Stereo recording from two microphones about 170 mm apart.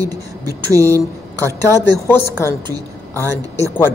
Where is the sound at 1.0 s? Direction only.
15° left (ahead or behind).